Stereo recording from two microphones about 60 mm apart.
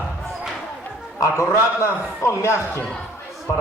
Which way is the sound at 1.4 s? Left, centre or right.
Left.